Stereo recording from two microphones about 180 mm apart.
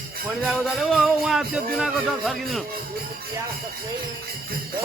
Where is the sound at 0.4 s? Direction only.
Centre (ahead or behind).